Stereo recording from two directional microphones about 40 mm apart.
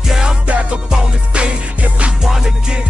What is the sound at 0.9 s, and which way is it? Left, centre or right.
Music, right.